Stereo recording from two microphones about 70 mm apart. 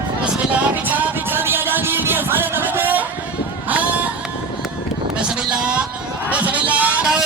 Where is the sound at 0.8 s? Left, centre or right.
Right.